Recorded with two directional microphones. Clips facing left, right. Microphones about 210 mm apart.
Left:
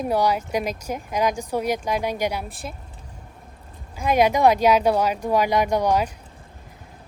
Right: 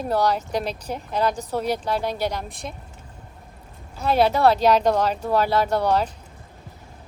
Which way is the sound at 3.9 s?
15° left (ahead or behind).